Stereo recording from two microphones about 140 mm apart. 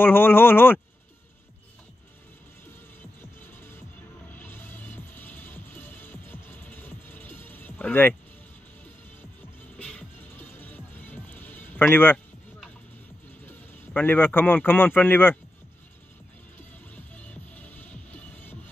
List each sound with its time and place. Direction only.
0.0 s speech: 15° left (ahead or behind)
3.2 s music: 15° left (ahead or behind)
9.8 s music: 10° left (ahead or behind)
13.5 s speech: 15° left (ahead or behind)
16.5 s music: 10° left (ahead or behind)